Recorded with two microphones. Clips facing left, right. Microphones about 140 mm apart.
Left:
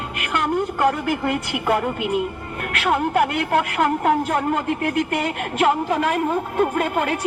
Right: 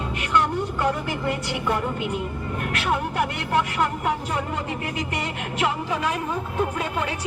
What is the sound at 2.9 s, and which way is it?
Speech, 60° left (ahead or behind).